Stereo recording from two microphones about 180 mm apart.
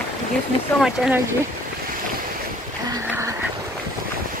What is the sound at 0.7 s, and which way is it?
Speech, centre (ahead or behind).